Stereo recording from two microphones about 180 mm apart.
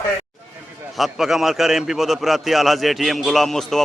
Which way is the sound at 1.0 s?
Centre (ahead or behind).